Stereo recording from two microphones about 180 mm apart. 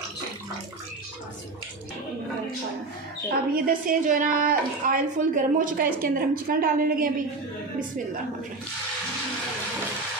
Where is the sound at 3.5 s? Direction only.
50° right (ahead or behind).